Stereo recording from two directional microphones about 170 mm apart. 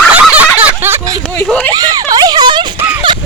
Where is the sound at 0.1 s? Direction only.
10° right (ahead or behind); by 2.6 s 25° right (ahead or behind).